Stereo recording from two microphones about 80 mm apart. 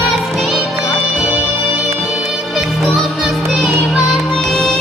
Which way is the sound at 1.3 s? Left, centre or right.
Centre.